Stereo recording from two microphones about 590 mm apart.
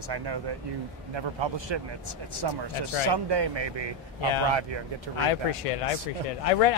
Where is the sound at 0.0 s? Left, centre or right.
Right.